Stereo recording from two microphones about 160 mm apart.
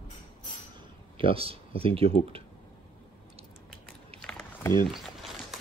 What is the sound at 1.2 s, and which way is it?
Speech, 35° right (ahead or behind).